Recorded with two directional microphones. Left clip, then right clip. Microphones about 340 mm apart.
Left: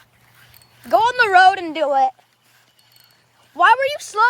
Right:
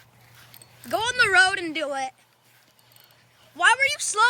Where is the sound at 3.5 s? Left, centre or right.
Centre.